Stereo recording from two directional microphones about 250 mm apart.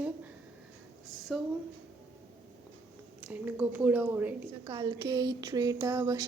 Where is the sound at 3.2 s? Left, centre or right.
Centre.